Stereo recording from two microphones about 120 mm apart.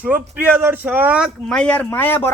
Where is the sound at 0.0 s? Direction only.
15° right (ahead or behind).